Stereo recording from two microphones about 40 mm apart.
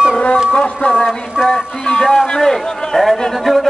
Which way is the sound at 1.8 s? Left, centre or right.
Left.